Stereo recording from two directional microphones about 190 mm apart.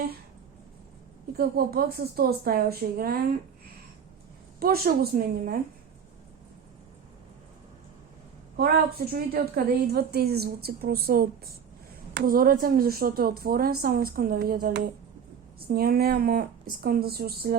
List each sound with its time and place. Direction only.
1.4 s a woman's voice: 50° right (ahead or behind)
4.6 s a woman's voice: 50° right (ahead or behind)
8.5 s a woman's voice: 55° right (ahead or behind)